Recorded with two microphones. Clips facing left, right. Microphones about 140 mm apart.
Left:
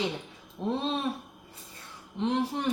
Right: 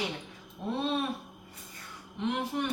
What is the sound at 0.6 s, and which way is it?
Speech, 30° left (ahead or behind).